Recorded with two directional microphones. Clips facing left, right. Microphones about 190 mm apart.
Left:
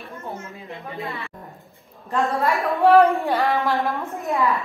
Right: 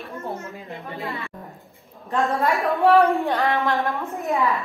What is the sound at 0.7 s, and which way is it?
Speech, 35° right (ahead or behind).